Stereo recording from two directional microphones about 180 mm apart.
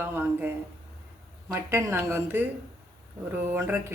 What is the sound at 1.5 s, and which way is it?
Speech, 15° right (ahead or behind).